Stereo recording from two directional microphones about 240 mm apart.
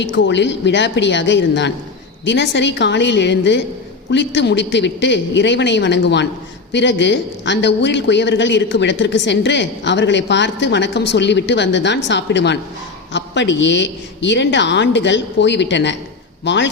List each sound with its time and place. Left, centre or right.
0.0 s a man's voice: left